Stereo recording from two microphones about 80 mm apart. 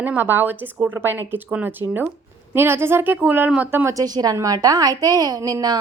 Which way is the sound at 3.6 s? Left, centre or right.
Right.